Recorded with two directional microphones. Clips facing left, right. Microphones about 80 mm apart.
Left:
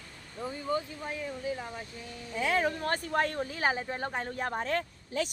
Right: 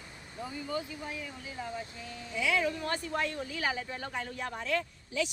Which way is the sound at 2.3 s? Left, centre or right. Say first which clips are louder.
Left 2 dB; left.